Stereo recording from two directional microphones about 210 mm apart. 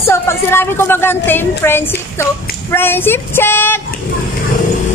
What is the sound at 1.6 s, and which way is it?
Female singing, 10° left (ahead or behind).